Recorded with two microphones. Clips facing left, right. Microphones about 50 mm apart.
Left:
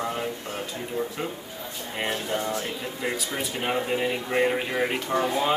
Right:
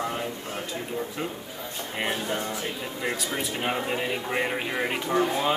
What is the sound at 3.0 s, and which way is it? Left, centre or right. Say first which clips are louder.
Speech: even; centre.